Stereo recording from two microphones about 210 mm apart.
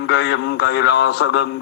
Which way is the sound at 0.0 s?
55° left (ahead or behind).